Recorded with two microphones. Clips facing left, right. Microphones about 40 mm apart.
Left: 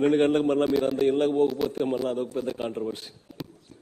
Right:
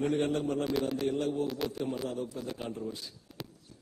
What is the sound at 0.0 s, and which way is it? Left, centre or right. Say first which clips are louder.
Speech: left 9 dB; left.